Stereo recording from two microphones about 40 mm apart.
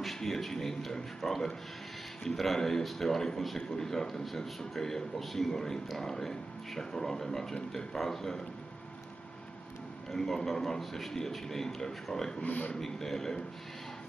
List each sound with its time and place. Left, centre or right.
0.0 s a man's voice: centre
10.1 s a man's voice: centre
12.4 s a man's voice: left
12.7 s a man's voice: centre